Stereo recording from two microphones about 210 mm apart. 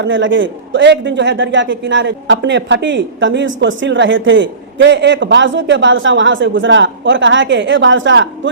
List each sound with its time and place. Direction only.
0.0 s a man's voice: 65° right (ahead or behind)